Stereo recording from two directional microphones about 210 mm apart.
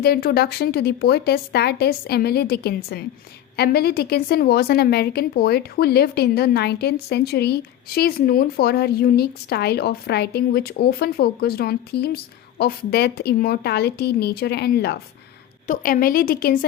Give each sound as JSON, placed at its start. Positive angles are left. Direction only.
{"t": 0.0, "sound": "a woman's voice", "side_deg": 45}
{"t": 15.6, "sound": "a woman's voice", "side_deg": 40}